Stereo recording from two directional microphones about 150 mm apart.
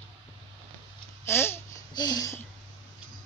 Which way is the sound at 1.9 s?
25° left (ahead or behind).